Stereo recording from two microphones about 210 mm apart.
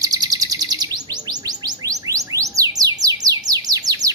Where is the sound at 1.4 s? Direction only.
15° right (ahead or behind).